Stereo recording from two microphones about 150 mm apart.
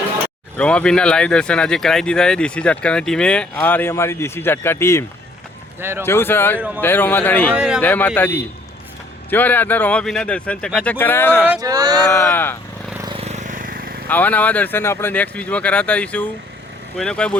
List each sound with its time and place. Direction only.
0.5 s speech: 10° left (ahead or behind)
7.5 s speech: 5° right (ahead or behind)
7.8 s speech: 10° left (ahead or behind)
11.6 s speech: 25° right (ahead or behind)
12.1 s speech: 15° left (ahead or behind)
13.1 s vehicle: 50° right (ahead or behind); by 13.9 s 70° right (ahead or behind)
14.1 s speech: 10° left (ahead or behind)